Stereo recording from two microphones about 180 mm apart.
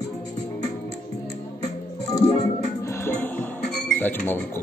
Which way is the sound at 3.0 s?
10° left (ahead or behind).